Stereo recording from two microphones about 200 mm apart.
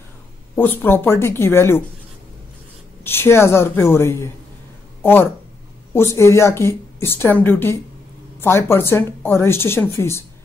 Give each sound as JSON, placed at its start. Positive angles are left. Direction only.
{"t": 0.6, "sound": "speech", "side_deg": 10}
{"t": 3.0, "sound": "speech", "side_deg": 10}